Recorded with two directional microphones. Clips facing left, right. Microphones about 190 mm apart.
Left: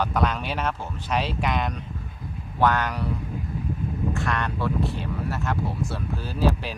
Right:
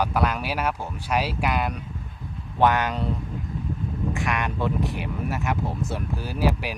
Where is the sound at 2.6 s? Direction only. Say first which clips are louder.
Right 2 dB; 20° right (ahead or behind).